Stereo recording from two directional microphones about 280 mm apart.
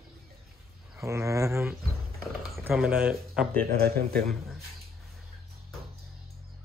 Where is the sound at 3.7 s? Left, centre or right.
Right.